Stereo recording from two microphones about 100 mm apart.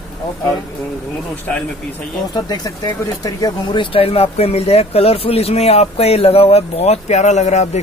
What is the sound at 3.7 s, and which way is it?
Speech, 70° left (ahead or behind).